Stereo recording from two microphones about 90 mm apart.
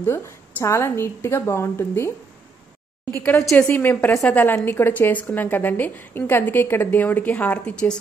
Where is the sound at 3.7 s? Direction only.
25° left (ahead or behind).